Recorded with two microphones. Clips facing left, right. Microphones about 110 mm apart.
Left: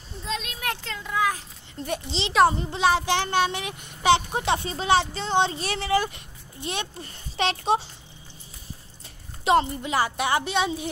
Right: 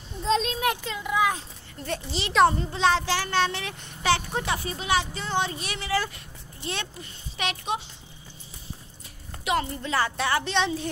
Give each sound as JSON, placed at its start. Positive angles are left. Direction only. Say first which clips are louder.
{"t": 0.2, "sound": "a sound", "louder": "right 8 dB", "side_deg": -30}
{"t": 0.7, "sound": "speech", "louder": "right 4 dB", "side_deg": -15}
{"t": 1.9, "sound": "a child's voice", "louder": "left 1 dB", "side_deg": 20}
{"t": 5.9, "sound": "speech", "louder": "left 1 dB", "side_deg": 20}
{"t": 7.0, "sound": "a child's voice", "louder": "left 5 dB", "side_deg": 35}
{"t": 9.4, "sound": "a woman's voice", "louder": "left 6 dB", "side_deg": 30}
{"t": 9.7, "sound": "speech", "louder": "left 2 dB", "side_deg": 15}